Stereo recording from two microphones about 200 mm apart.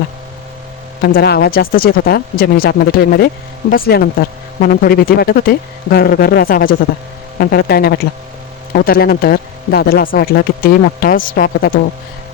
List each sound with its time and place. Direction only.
1.0 s speech: 55° left (ahead or behind)